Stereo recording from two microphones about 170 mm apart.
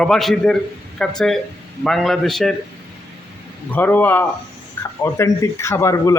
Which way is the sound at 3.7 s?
10° left (ahead or behind).